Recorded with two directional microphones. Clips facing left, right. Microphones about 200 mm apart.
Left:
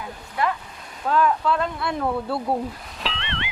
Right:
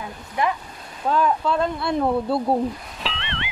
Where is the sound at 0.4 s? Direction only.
20° right (ahead or behind).